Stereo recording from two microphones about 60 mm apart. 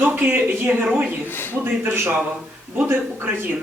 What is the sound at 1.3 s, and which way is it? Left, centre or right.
Speech, left.